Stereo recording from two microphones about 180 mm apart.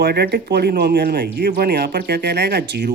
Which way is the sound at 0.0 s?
65° right (ahead or behind).